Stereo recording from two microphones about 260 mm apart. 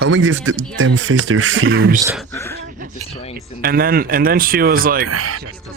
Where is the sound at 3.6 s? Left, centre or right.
Right.